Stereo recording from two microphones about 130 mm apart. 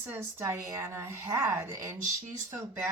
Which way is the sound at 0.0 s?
20° right (ahead or behind).